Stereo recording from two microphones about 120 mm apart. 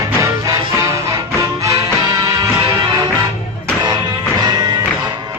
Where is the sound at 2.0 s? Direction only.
35° right (ahead or behind).